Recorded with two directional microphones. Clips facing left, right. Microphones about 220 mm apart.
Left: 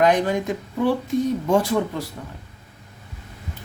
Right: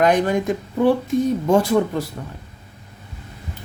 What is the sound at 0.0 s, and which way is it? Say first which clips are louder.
Speech: right 2 dB; 50° right (ahead or behind).